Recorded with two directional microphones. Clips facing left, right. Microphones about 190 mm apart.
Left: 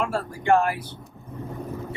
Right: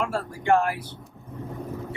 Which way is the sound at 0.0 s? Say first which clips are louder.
Left 1 dB; 20° left (ahead or behind).